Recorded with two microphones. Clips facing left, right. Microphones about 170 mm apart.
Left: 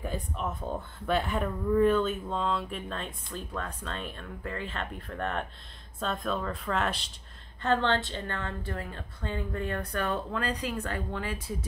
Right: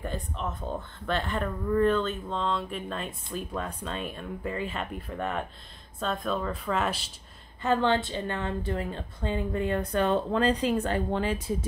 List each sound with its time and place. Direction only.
0.0 s a woman's voice: 10° left (ahead or behind); by 11.5 s 25° right (ahead or behind)